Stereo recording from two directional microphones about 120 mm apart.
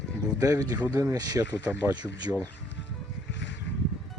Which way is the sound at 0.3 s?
25° right (ahead or behind).